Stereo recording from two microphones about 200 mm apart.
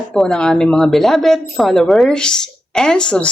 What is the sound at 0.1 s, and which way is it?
Speech, 5° left (ahead or behind).